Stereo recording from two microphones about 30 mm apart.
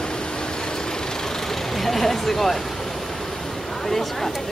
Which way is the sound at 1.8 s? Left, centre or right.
Centre.